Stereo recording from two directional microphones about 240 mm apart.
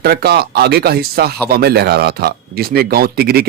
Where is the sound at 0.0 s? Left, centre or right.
Right.